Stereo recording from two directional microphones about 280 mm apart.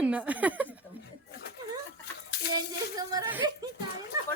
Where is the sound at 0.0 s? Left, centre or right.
Centre.